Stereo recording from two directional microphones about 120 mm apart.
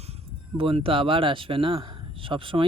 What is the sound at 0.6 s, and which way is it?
A man's voice, 50° right (ahead or behind).